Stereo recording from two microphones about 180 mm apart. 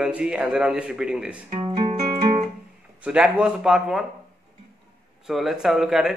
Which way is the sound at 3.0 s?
5° right (ahead or behind).